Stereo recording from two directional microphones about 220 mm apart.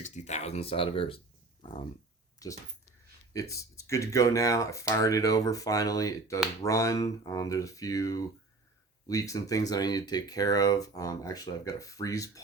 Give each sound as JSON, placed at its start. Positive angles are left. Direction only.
{"t": 0.0, "sound": "speech", "side_deg": 30}